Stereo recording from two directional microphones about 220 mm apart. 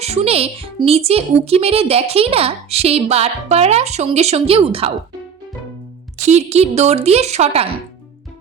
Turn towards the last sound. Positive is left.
turn(degrees=-30)  # may be behind; listen again after turning